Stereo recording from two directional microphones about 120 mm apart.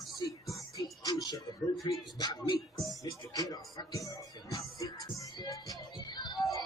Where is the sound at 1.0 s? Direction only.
30° left (ahead or behind).